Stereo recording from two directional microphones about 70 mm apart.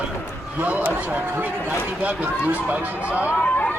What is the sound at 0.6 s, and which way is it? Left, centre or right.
Speech, right.